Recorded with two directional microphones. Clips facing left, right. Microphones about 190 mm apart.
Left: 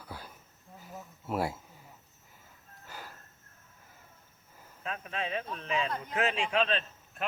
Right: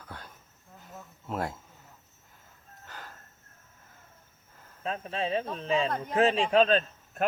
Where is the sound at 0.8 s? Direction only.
5° left (ahead or behind).